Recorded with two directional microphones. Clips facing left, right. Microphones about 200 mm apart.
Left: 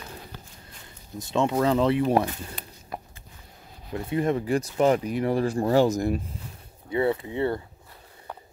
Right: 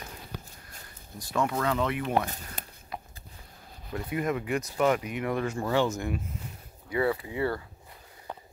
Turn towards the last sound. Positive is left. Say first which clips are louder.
# left 3 dB
turn(degrees=25)  # may be behind; listen again after turning